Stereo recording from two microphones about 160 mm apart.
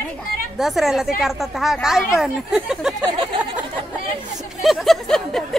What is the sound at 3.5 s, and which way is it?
A woman's voice, 10° right (ahead or behind).